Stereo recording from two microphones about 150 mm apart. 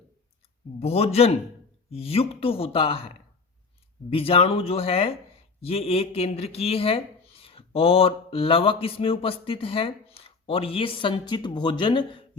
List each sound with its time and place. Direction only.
0.8 s a man's voice: 40° left (ahead or behind)
4.1 s speech: 40° left (ahead or behind)